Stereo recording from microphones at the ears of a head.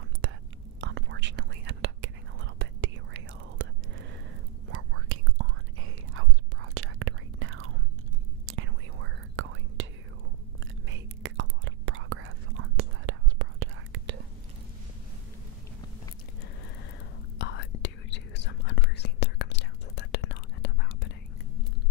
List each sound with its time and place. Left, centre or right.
0.7 s whispering: right
10.9 s whispering: right
17.4 s whispering: left